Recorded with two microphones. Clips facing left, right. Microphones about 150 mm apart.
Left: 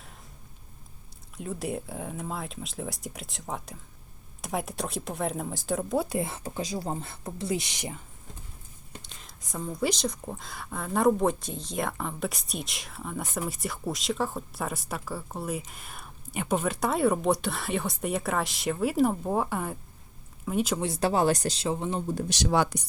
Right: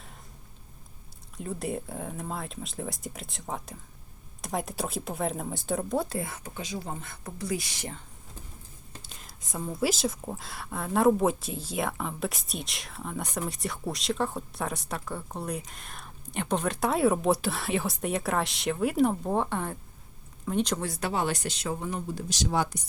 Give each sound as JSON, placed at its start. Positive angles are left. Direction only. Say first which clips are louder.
{"t": 1.4, "sound": "speech", "louder": "even", "side_deg": 0}
{"t": 6.1, "sound": "speech", "louder": "left 4 dB", "side_deg": 25}
{"t": 9.0, "sound": "speech", "louder": "even", "side_deg": -5}
{"t": 20.8, "sound": "speech", "louder": "left 5 dB", "side_deg": 25}
{"t": 21.1, "sound": "speech", "louder": "left 5 dB", "side_deg": 40}
{"t": 22.3, "sound": "speech", "louder": "left 2 dB", "side_deg": 70}